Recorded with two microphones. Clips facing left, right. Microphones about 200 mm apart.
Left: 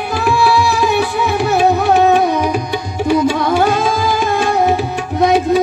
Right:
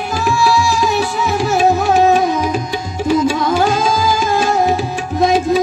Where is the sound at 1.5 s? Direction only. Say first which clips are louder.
Left 1 dB; 60° left (ahead or behind).